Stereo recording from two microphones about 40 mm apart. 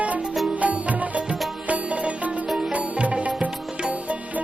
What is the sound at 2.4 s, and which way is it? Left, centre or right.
Music, centre.